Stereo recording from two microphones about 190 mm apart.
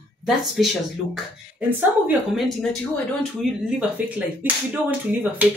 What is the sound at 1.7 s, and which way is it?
Speech, 10° right (ahead or behind).